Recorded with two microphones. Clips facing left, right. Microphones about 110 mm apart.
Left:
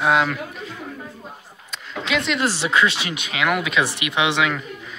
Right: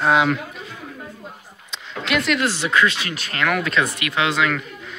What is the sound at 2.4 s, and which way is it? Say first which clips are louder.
Speech: even; 30° left (ahead or behind).